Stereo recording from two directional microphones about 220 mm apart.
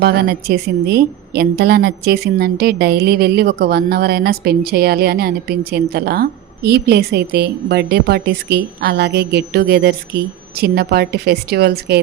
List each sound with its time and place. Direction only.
0.0 s a woman's voice: 45° right (ahead or behind)